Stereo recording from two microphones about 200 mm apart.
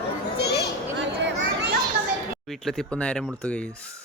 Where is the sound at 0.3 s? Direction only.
55° left (ahead or behind).